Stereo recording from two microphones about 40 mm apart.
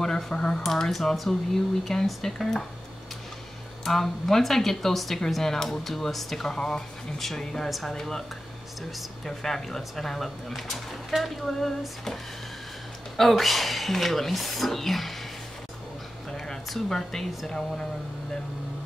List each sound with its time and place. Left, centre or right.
0.0 s speech: centre
3.8 s speech: centre
6.5 s speech: left
7.2 s speech: centre
9.2 s speech: centre
13.2 s speech: centre
16.3 s a sound: centre
16.6 s speech: centre